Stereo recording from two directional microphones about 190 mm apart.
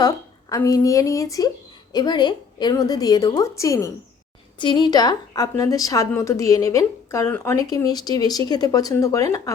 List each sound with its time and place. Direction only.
0.5 s a woman's voice: 20° left (ahead or behind)